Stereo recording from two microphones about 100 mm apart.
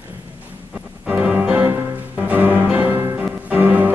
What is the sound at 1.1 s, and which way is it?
Music, 15° right (ahead or behind).